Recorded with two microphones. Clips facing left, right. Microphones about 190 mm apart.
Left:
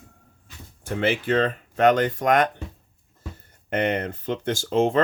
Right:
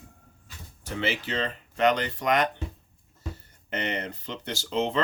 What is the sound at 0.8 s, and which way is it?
Speech, 50° left (ahead or behind).